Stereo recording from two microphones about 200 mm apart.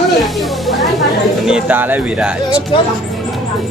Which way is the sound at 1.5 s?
5° right (ahead or behind).